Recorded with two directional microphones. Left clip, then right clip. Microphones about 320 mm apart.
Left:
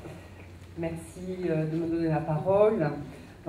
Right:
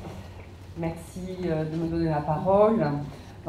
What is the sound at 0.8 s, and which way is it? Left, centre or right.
Speech, right.